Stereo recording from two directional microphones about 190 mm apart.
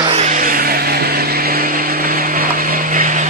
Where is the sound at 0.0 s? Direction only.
35° right (ahead or behind).